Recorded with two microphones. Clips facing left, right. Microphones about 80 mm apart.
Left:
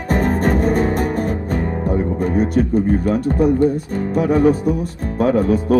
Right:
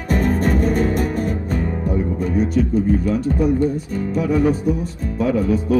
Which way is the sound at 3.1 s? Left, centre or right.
Left.